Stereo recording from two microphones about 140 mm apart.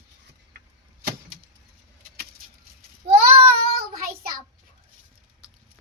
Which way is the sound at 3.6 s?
90° right.